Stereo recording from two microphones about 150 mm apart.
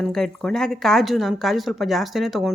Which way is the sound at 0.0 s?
Centre (ahead or behind).